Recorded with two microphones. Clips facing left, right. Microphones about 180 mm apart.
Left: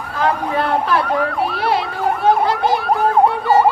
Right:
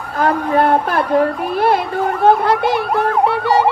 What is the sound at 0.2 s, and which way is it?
A child's voice, 50° right (ahead or behind).